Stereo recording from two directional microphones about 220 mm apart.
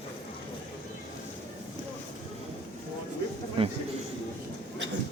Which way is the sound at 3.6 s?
25° right (ahead or behind).